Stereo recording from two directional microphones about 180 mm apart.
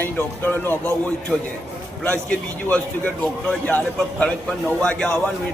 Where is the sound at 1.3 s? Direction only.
Centre (ahead or behind).